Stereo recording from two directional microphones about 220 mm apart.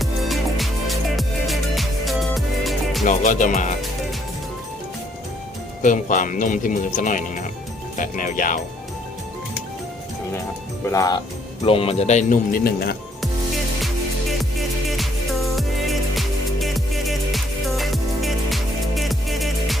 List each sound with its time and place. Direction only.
0.0 s music: centre (ahead or behind)
3.1 s speech: 35° left (ahead or behind)
5.8 s speech: 35° left (ahead or behind)
10.8 s speech: 15° left (ahead or behind); by 13.0 s 45° left (ahead or behind)
14.8 s music: centre (ahead or behind)